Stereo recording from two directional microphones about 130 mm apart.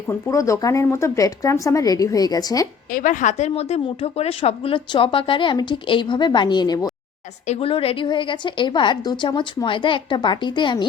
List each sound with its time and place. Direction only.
0.1 s speech: 25° left (ahead or behind)
2.9 s a woman's voice: 85° left; by 6.9 s 35° left (ahead or behind)
7.4 s a woman's voice: 50° left (ahead or behind)